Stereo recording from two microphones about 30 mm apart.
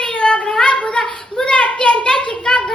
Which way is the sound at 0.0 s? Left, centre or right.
Left.